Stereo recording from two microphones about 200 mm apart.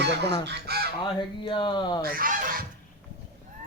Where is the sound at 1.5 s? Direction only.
25° left (ahead or behind).